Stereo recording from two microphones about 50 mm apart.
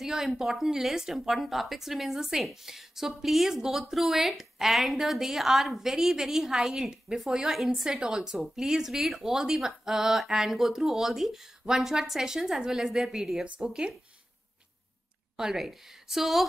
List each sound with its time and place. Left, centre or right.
0.0 s a woman's voice: centre
7.8 s speech: centre
15.3 s a woman's voice: centre